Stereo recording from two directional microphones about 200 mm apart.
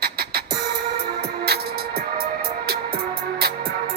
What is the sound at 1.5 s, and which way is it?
Music, 55° right (ahead or behind).